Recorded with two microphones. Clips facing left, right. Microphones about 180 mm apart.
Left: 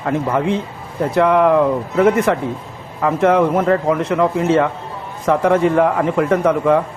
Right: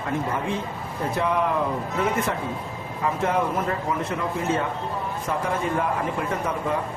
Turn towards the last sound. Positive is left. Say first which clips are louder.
# left 12 dB
turn(degrees=90)